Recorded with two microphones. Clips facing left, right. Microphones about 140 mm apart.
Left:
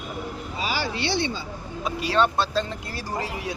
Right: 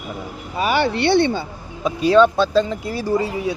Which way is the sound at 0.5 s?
60° right (ahead or behind).